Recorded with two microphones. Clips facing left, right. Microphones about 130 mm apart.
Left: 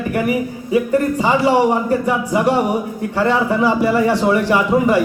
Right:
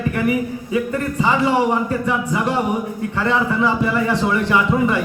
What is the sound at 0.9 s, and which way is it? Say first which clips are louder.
Speech: left 4 dB; 35° left (ahead or behind).